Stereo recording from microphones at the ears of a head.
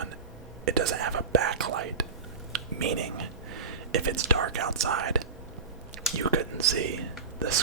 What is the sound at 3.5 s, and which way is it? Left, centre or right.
Speech, right.